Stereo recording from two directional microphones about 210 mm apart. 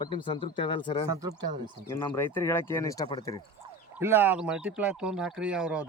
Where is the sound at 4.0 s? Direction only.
10° right (ahead or behind).